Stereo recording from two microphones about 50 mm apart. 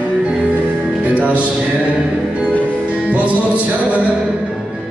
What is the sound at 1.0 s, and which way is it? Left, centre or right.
Music, right.